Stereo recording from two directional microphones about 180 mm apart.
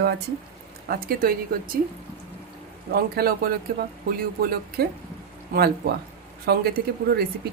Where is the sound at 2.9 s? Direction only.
55° right (ahead or behind).